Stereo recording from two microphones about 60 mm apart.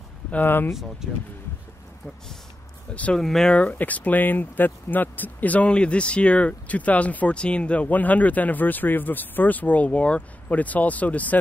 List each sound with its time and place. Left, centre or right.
0.3 s speech: left
2.9 s speech: left
3.2 s speech: centre
3.5 s speech: left